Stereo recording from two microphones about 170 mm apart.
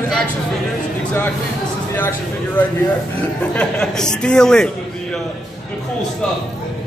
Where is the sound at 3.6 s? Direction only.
5° left (ahead or behind).